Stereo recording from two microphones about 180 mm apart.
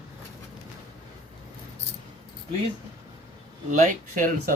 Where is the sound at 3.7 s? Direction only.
45° right (ahead or behind).